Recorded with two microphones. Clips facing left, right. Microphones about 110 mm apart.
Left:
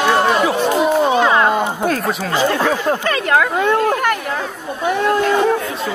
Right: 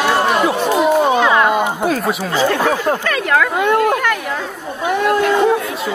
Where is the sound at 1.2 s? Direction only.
25° left (ahead or behind).